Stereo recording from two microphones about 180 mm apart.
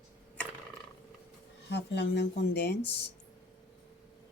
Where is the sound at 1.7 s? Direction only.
75° left (ahead or behind).